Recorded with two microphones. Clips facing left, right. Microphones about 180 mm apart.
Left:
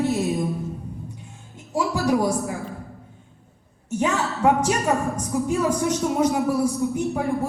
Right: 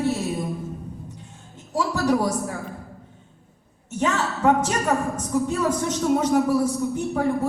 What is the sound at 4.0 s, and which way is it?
A woman's voice, 10° left (ahead or behind).